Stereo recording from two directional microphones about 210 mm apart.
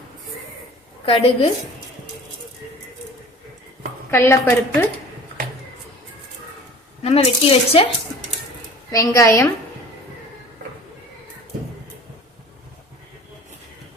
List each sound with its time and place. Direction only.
1.0 s speech: 25° left (ahead or behind)
4.1 s speech: 10° left (ahead or behind)
7.0 s speech: 30° left (ahead or behind)
8.9 s speech: 15° left (ahead or behind)